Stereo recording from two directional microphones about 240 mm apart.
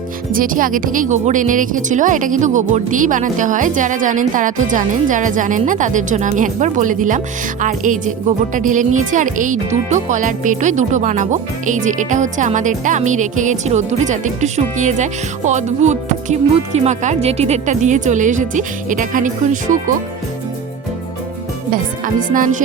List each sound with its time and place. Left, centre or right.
0.3 s speech: right
21.7 s speech: right